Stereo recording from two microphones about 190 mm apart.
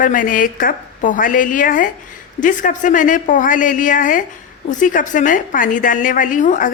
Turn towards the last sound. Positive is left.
turn(degrees=40)  # may be behind; listen again after turning